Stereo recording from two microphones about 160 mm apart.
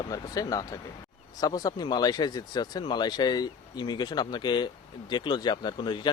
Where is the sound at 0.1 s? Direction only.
20° left (ahead or behind).